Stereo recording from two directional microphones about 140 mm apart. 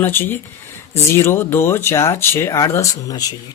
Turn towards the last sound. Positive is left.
turn(degrees=25)  # may be behind; listen again after turning